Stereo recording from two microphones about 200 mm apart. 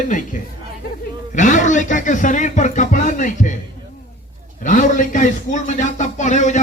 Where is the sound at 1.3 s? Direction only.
40° left (ahead or behind).